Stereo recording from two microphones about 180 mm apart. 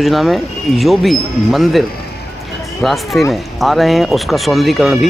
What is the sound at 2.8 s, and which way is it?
Speech, centre (ahead or behind).